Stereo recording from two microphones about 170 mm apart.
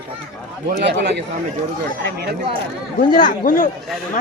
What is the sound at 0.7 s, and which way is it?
Speech, 75° right (ahead or behind).